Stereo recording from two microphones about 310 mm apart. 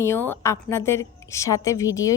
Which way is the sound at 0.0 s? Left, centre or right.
Centre.